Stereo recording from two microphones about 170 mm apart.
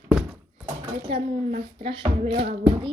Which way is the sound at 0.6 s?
30° right (ahead or behind).